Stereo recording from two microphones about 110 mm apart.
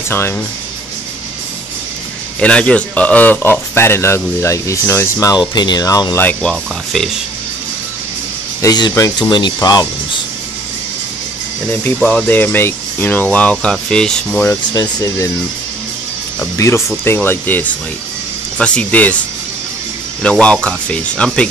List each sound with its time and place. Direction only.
2.4 s speech: 10° left (ahead or behind)
5.5 s speech: 40° left (ahead or behind)
6.1 s speech: 15° left (ahead or behind)
6.5 s speech: centre (ahead or behind)
8.6 s speech: 35° left (ahead or behind)
11.8 s speech: 10° left (ahead or behind)
14.7 s speech: 35° left (ahead or behind)
16.5 s speech: 25° left (ahead or behind)
20.2 s speech: 10° left (ahead or behind)